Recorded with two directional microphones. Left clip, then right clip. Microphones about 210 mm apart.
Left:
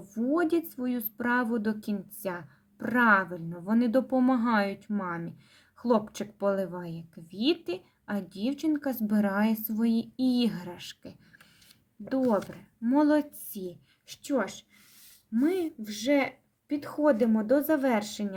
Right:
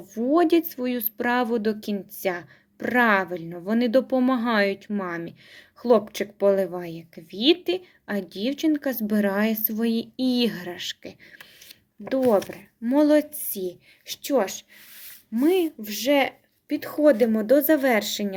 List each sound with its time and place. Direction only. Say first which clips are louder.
0.2 s speech: right 7 dB; 20° left (ahead or behind)
12.2 s speech: right 7 dB; centre (ahead or behind)
12.8 s speech: right 5 dB; 20° left (ahead or behind)